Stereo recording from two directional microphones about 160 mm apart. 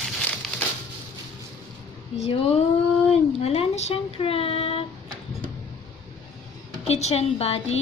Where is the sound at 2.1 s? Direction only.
40° left (ahead or behind).